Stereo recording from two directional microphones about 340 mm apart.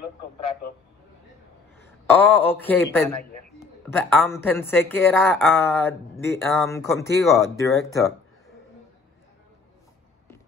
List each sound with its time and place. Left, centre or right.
2.0 s a man's voice: centre